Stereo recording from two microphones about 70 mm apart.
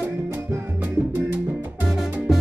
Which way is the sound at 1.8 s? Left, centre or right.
Centre.